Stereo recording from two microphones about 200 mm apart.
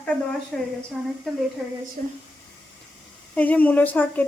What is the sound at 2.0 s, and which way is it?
Speech, 40° right (ahead or behind).